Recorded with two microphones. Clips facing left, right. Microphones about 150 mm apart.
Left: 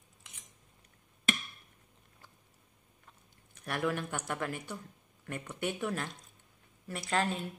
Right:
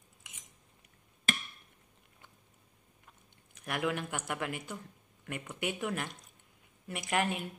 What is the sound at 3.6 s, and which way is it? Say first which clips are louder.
Speech: even; 15° right (ahead or behind).